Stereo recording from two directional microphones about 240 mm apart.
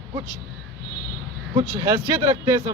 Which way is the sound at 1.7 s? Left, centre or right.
Centre.